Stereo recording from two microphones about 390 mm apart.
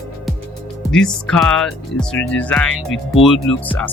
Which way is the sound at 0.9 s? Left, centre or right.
Centre.